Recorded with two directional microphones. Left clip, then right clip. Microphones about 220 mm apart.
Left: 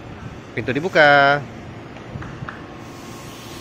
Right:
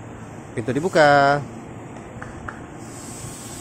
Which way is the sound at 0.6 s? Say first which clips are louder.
Left 2 dB; 15° right (ahead or behind).